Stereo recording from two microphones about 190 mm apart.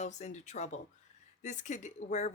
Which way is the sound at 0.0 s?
35° left (ahead or behind).